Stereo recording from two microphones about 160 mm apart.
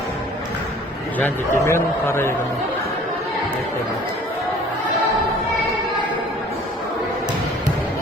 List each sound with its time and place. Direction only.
1.2 s a man's voice: 15° left (ahead or behind)